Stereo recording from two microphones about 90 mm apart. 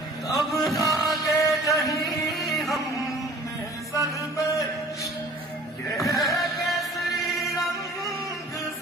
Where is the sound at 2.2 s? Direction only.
Centre (ahead or behind).